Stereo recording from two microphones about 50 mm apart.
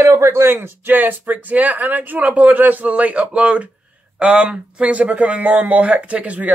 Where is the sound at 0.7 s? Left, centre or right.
Right; by 4.4 s centre.